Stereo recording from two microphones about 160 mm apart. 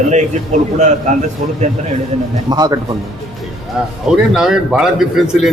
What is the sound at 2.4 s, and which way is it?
Speech, 25° right (ahead or behind).